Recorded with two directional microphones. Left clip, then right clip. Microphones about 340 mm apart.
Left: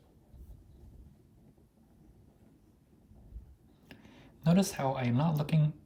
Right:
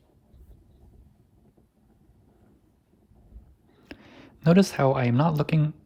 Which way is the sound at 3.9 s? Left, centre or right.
Centre.